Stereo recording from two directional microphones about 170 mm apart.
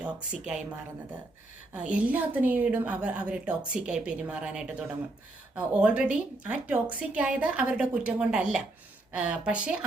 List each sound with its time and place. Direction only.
0.0 s speech: 5° right (ahead or behind)
1.7 s a woman's voice: 5° right (ahead or behind)